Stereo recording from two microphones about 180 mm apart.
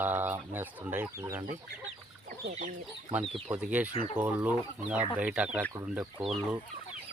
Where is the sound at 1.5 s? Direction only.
45° right (ahead or behind).